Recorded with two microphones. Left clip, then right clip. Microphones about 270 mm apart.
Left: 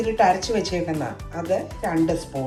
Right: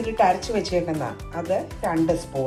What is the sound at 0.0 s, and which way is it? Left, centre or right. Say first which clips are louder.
A woman's voice: left 1 dB; centre.